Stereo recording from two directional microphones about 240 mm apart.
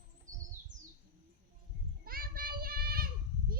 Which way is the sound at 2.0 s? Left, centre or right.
Right.